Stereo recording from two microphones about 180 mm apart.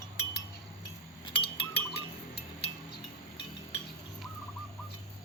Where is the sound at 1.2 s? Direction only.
25° left (ahead or behind).